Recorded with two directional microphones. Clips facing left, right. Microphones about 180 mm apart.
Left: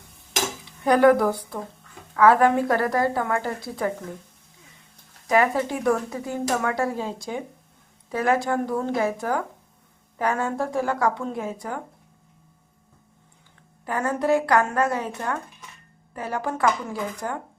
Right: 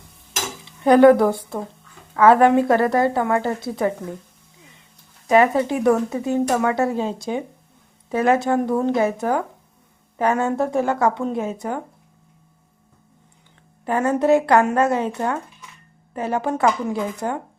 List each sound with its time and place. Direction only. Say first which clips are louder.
0.9 s speech: right 5 dB; 25° right (ahead or behind)
5.3 s speech: right 5 dB; 25° right (ahead or behind)
13.8 s speech: right 5 dB; 25° right (ahead or behind)